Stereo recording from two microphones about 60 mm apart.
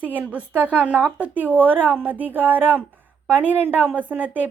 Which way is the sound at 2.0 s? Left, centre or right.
Right.